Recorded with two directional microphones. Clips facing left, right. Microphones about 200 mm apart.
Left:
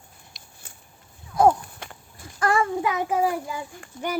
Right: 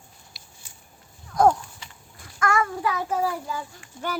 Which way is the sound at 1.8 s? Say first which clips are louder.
Left 6 dB; 55° left (ahead or behind).